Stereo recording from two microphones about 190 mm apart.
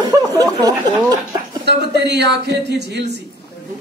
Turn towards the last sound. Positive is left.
turn(degrees=-60)  # may be behind; listen again after turning